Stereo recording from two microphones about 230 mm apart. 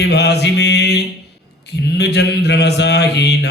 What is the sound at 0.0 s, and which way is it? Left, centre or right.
Mantra, left.